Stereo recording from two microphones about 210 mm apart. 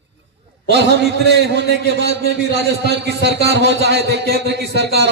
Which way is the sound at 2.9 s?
55° right (ahead or behind).